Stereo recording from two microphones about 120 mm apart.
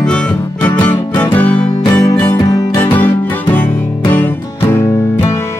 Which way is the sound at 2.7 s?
15° left (ahead or behind).